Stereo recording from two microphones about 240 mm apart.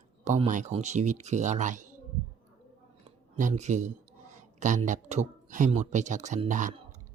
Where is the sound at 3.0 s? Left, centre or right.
Right.